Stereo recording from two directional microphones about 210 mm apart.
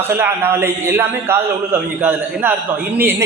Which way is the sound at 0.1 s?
10° right (ahead or behind).